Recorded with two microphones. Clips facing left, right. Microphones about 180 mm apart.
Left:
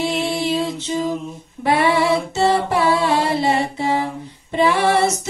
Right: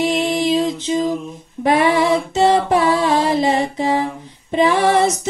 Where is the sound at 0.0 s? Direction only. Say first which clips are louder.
Right 3 dB; 20° right (ahead or behind).